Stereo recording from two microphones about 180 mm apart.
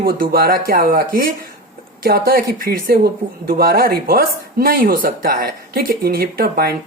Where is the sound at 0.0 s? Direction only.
55° right (ahead or behind).